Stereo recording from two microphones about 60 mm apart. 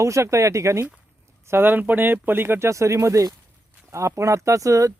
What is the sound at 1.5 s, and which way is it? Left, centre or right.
Speech, right.